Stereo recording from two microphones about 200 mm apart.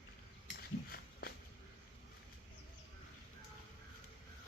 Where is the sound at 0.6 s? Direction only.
50° left (ahead or behind).